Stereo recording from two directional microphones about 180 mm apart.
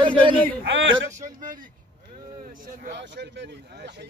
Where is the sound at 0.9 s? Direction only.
15° right (ahead or behind).